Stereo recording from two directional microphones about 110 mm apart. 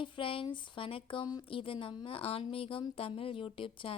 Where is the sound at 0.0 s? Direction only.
50° left (ahead or behind).